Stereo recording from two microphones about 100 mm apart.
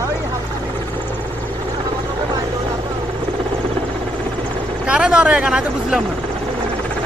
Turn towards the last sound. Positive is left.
turn(degrees=-10)  # may be behind; listen again after turning